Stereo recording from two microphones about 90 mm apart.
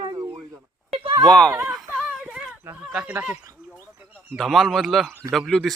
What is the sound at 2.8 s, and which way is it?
Speech, 10° right (ahead or behind).